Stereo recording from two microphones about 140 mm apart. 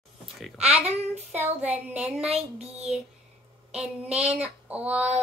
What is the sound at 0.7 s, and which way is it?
Child singing, 50° right (ahead or behind).